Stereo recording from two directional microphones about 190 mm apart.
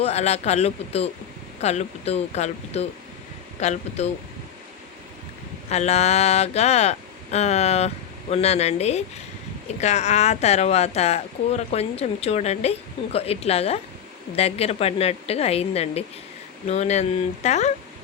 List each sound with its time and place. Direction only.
0.0 s speech: 35° left (ahead or behind)
5.6 s speech: 35° left (ahead or behind)